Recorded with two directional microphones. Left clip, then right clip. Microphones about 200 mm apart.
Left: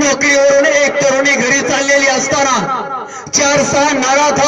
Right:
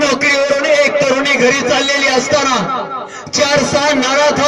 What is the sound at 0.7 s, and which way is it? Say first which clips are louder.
A man's voice: even; 25° right (ahead or behind).